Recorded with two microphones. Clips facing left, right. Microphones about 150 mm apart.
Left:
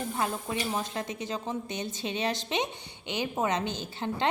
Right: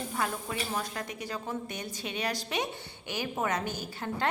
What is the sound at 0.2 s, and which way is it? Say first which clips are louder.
A woman's voice: left 1 dB; 20° left (ahead or behind).